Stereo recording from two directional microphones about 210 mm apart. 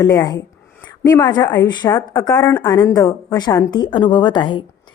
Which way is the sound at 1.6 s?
20° left (ahead or behind).